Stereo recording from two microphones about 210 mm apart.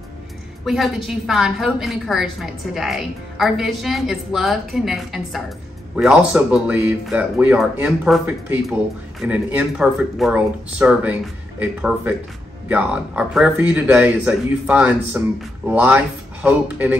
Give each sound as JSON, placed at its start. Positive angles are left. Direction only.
{"t": 0.7, "sound": "a woman's voice", "side_deg": 0}